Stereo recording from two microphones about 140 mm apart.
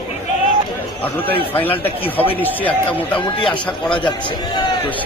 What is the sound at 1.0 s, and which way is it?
Speech, 10° left (ahead or behind).